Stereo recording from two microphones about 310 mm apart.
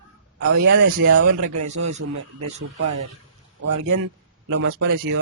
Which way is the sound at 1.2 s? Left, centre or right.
Right.